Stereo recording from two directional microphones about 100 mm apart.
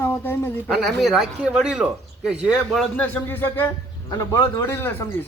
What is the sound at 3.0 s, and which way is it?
Speech, 20° left (ahead or behind).